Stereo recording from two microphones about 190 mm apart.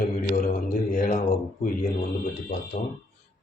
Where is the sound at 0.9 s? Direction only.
40° left (ahead or behind).